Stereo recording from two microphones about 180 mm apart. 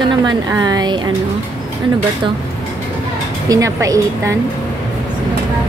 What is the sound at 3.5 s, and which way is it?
Speech, 20° right (ahead or behind).